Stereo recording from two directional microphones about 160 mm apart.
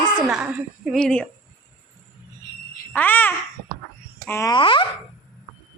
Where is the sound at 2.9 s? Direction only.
10° left (ahead or behind).